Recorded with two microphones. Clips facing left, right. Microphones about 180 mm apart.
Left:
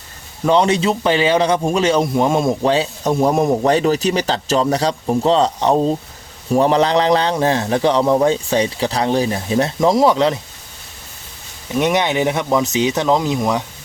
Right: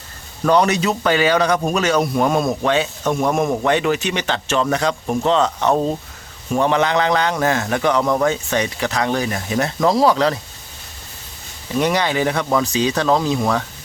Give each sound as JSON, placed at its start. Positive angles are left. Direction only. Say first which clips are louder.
{"t": 0.4, "sound": "speech", "louder": "left 1 dB", "side_deg": 25}
{"t": 11.7, "sound": "speech", "louder": "left 2 dB", "side_deg": 20}